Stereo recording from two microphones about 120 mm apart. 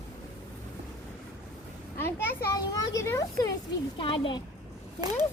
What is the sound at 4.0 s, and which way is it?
Speech, 45° left (ahead or behind).